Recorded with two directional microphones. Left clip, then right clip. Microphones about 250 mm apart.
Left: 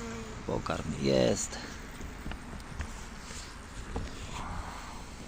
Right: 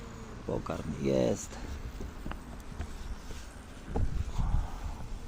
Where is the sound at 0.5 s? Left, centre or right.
Centre.